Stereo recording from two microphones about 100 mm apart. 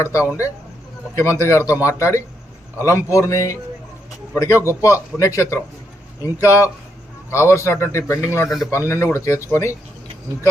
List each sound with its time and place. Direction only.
0.0 s speech: 30° left (ahead or behind)
4.7 s speech: 30° left (ahead or behind)
8.4 s speech: centre (ahead or behind)
8.9 s speech: 25° left (ahead or behind)